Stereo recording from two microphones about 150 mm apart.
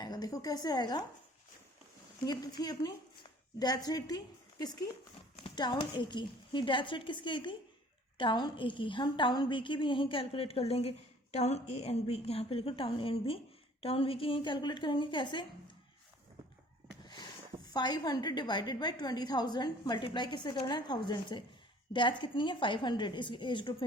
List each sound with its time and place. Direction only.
0.0 s a woman's voice: 25° left (ahead or behind)
2.2 s a woman's voice: 25° left (ahead or behind)
17.7 s a woman's voice: 30° left (ahead or behind)